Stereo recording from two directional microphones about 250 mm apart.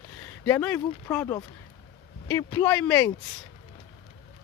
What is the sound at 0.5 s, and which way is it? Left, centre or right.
Speech, centre.